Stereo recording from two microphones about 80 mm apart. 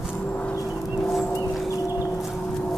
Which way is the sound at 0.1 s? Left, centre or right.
Left.